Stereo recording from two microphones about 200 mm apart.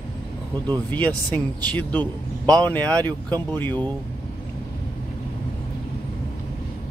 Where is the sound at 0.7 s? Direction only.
10° left (ahead or behind).